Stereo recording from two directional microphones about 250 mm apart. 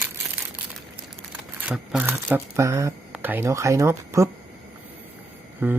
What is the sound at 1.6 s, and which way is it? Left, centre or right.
Speech, centre.